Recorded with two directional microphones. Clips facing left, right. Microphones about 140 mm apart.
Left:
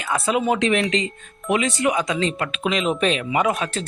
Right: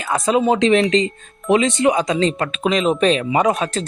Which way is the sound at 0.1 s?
35° right (ahead or behind).